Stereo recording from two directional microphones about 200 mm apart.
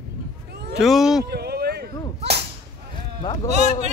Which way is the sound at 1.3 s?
55° right (ahead or behind).